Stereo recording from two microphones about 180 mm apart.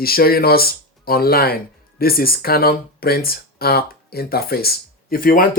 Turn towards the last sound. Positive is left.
turn(degrees=50)  # may be behind; listen again after turning